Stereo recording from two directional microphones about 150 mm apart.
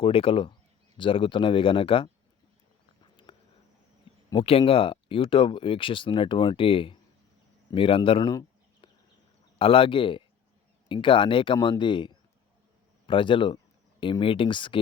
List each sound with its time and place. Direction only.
0.0 s speech: 35° left (ahead or behind)
4.4 s speech: 35° left (ahead or behind)
8.3 s bird: 25° left (ahead or behind)
9.6 s speech: 35° left (ahead or behind)